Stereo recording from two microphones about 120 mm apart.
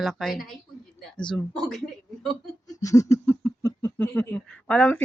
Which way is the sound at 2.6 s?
30° left (ahead or behind).